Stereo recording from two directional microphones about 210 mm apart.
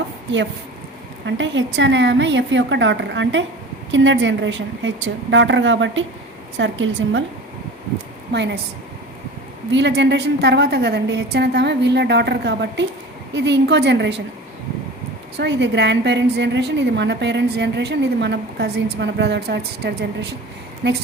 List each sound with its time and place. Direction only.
1.2 s a woman's voice: 60° right (ahead or behind)
8.3 s a woman's voice: 55° right (ahead or behind)
9.7 s a woman's voice: 55° right (ahead or behind)
15.4 s a woman's voice: 55° right (ahead or behind)